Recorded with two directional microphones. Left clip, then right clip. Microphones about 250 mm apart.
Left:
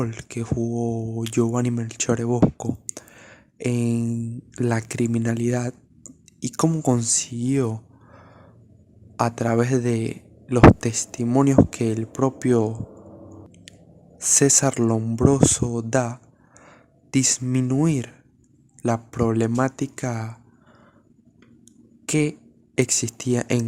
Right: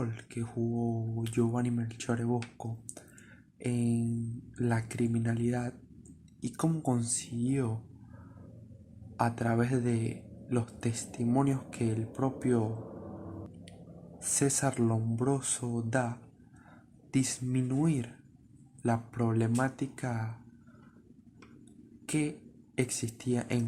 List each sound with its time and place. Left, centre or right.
0.0 s speech: left
9.1 s speech: left
14.2 s speech: left
22.0 s speech: left